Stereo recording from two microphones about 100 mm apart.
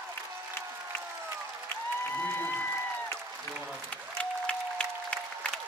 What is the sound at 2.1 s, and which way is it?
Applause, 20° left (ahead or behind).